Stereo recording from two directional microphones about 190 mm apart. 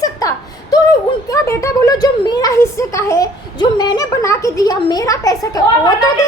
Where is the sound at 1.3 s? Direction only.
15° left (ahead or behind).